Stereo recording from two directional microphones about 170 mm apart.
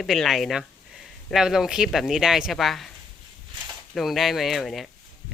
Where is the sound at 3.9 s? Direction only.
Centre (ahead or behind).